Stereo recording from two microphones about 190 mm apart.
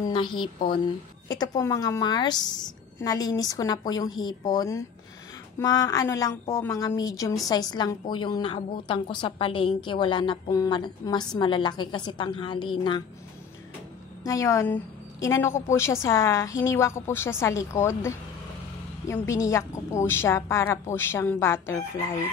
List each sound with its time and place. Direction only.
0.0 s a woman's voice: 25° left (ahead or behind)
14.2 s a woman's voice: 15° left (ahead or behind)